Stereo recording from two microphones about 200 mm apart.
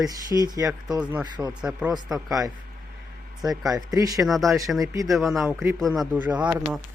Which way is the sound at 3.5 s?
20° right (ahead or behind).